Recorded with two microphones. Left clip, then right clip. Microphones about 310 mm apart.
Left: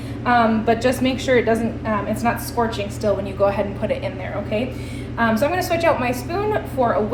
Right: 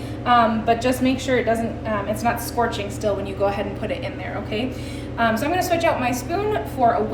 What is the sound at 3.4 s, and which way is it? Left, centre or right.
Speech, centre.